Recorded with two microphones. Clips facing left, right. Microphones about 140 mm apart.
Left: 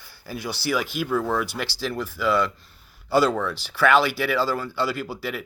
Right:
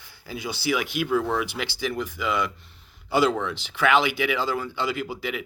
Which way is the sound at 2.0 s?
15° right (ahead or behind).